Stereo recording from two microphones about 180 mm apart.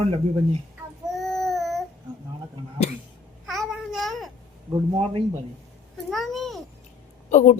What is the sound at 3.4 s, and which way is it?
Babbling, centre (ahead or behind).